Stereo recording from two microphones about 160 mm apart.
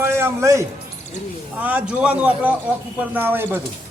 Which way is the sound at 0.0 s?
15° right (ahead or behind).